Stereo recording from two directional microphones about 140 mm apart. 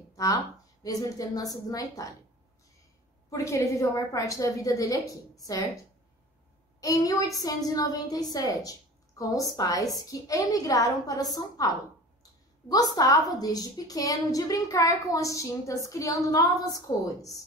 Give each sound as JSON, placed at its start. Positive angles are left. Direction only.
{"t": 0.1, "sound": "a sound", "side_deg": 25}
{"t": 0.8, "sound": "a woman's voice", "side_deg": 25}
{"t": 3.3, "sound": "a woman's voice", "side_deg": 20}
{"t": 6.8, "sound": "a woman's voice", "side_deg": 25}
{"t": 12.2, "sound": "a sound", "side_deg": 25}
{"t": 13.4, "sound": "a woman's voice", "side_deg": 25}